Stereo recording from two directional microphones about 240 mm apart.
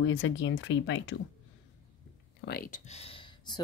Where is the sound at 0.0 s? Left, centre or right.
Left.